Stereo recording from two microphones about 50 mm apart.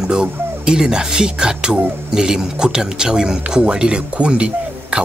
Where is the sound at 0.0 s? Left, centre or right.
Centre.